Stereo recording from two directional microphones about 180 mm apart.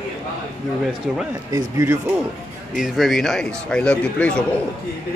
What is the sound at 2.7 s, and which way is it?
Speech, centre (ahead or behind).